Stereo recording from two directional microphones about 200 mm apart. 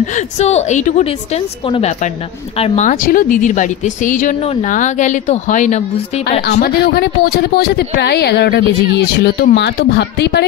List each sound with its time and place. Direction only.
0.0 s speech: 35° left (ahead or behind)
6.5 s a woman's voice: 50° left (ahead or behind)